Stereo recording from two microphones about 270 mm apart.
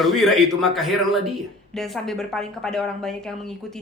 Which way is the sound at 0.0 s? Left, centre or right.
Centre.